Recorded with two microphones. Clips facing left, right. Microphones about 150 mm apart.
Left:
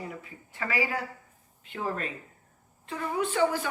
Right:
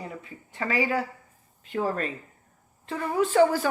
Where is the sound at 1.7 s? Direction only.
40° right (ahead or behind).